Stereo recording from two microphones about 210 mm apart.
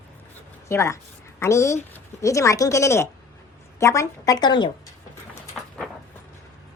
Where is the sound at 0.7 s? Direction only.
15° left (ahead or behind).